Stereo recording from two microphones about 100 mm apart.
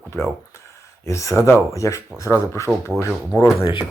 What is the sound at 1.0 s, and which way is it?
Speech, 30° left (ahead or behind).